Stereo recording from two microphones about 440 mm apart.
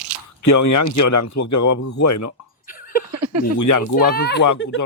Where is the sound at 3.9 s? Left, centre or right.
Left.